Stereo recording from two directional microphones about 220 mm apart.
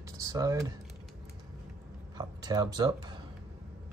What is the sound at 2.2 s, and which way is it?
Speech, 20° right (ahead or behind).